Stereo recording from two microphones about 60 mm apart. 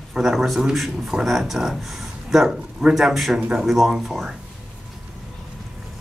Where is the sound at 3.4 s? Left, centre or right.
Centre.